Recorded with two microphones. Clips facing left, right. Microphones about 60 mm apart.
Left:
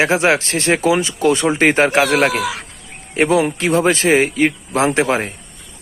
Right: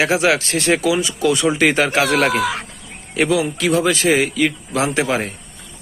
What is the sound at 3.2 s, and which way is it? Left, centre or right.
Speech, left.